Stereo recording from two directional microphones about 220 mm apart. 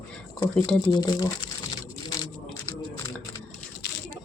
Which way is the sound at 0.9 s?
20° left (ahead or behind).